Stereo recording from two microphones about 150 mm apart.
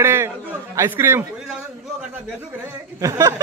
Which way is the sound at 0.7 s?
15° right (ahead or behind).